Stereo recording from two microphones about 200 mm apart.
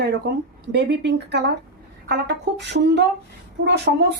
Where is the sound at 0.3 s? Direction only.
55° right (ahead or behind).